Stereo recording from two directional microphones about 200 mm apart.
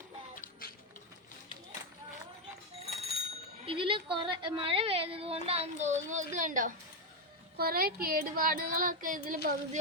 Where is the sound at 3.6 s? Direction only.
25° right (ahead or behind); by 6.7 s 40° right (ahead or behind).